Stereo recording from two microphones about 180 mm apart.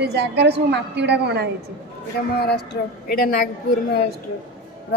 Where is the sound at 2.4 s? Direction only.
60° left (ahead or behind).